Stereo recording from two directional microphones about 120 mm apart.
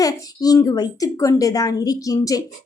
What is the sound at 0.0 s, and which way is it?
A woman's voice, 30° left (ahead or behind).